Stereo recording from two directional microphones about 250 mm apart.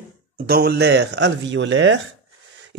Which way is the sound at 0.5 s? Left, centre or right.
Right.